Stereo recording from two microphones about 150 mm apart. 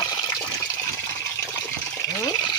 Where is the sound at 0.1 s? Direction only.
30° left (ahead or behind).